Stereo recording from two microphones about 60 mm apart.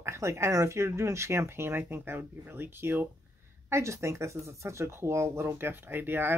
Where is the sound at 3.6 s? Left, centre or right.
Right.